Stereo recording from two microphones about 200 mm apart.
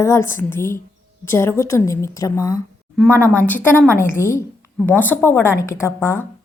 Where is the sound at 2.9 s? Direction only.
5° left (ahead or behind).